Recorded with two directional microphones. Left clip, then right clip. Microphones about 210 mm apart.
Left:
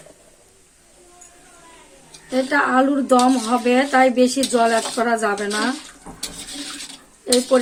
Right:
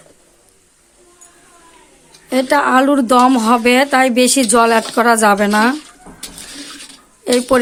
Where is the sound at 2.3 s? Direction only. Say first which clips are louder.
Right 5 dB; 50° right (ahead or behind).